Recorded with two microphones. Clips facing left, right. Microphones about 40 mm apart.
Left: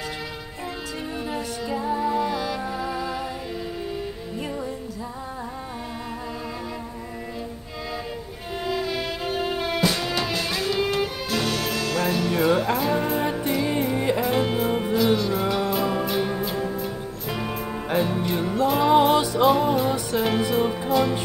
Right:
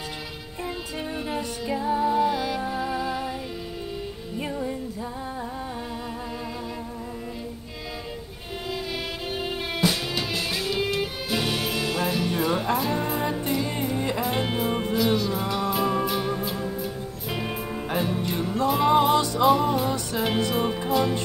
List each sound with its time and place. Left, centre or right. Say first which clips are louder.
1.9 s music: right 2 dB; centre
8.6 s music: left 5 dB; centre
11.0 s music: left 2 dB; centre
13.8 s music: left 4 dB; centre
14.2 s music: left 3 dB; centre
17.9 s music: left 4 dB; centre
18.4 s music: left 2 dB; left
18.7 s music: left 1 dB; centre
18.9 s music: left 3 dB; centre
19.3 s music: left 1 dB; centre